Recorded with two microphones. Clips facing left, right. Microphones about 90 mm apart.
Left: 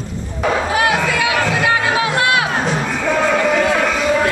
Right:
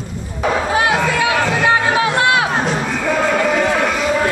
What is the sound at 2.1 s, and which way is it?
Music, 25° right (ahead or behind).